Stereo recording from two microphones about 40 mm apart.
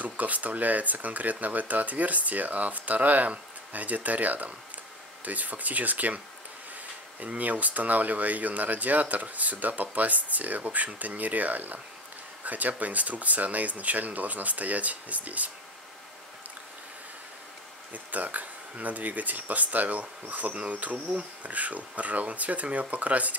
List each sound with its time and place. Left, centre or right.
0.0 s speech: right
7.2 s speech: right
17.9 s speech: right